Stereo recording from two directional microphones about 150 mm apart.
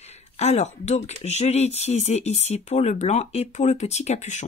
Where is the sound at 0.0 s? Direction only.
45° left (ahead or behind).